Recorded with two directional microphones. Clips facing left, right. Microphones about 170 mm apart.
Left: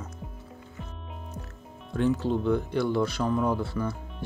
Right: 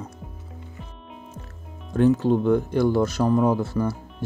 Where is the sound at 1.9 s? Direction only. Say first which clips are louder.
Right 7 dB; 50° right (ahead or behind).